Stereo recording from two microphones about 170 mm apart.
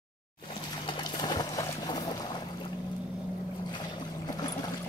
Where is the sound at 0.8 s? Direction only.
25° left (ahead or behind).